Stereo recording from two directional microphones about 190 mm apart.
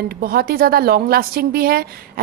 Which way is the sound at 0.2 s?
50° right (ahead or behind).